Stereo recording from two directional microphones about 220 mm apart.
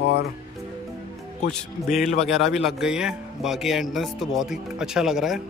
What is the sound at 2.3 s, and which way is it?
A man's voice, centre (ahead or behind).